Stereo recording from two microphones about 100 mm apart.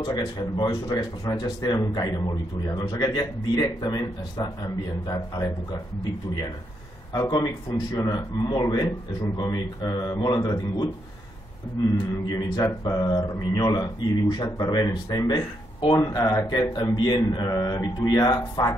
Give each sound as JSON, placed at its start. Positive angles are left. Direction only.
{"t": 0.0, "sound": "a man's voice", "side_deg": 45}
{"t": 7.2, "sound": "a man's voice", "side_deg": 40}
{"t": 12.3, "sound": "a man's voice", "side_deg": 40}
{"t": 17.5, "sound": "a man's voice", "side_deg": 35}